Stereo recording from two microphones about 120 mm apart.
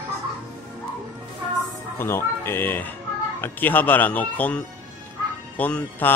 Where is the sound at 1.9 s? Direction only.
20° left (ahead or behind).